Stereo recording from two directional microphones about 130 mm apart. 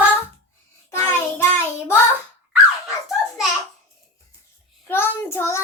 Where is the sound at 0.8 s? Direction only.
20° left (ahead or behind).